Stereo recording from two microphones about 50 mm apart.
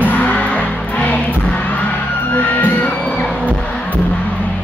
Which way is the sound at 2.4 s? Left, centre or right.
Left.